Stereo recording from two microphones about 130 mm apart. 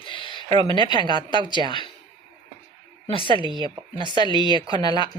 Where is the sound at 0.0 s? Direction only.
40° left (ahead or behind).